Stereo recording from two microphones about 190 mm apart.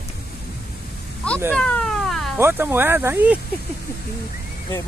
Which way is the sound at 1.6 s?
5° left (ahead or behind).